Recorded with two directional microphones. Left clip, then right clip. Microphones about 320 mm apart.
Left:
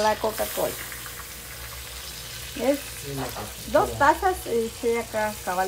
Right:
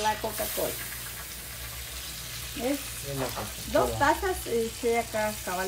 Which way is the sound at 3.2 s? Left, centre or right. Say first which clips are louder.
Right 1 dB; centre.